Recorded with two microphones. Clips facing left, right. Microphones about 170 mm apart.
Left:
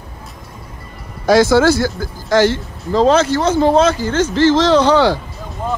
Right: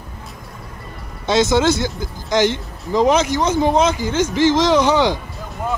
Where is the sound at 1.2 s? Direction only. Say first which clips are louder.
Left 5 dB; 20° right (ahead or behind).